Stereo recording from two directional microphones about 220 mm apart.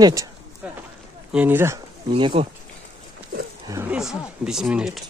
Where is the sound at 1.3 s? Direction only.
10° right (ahead or behind).